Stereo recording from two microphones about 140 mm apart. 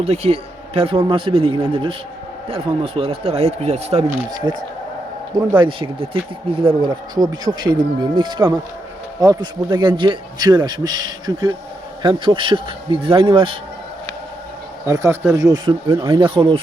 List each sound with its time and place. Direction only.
0.0 s a man's voice: 50° right (ahead or behind)
4.3 s a man's voice: 30° right (ahead or behind)
7.2 s a man's voice: 25° right (ahead or behind)
14.8 s a man's voice: 20° right (ahead or behind)
15.9 s a man's voice: 35° right (ahead or behind)